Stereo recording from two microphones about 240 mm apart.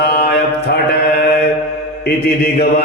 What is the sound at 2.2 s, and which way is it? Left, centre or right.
Mantra, left.